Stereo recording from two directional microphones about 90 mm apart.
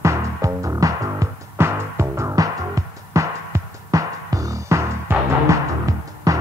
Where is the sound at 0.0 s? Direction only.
35° right (ahead or behind).